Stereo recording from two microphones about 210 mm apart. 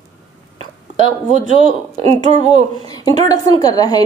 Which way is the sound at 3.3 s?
15° left (ahead or behind).